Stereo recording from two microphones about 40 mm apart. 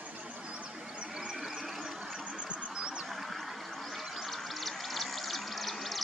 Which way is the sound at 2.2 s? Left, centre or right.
Right.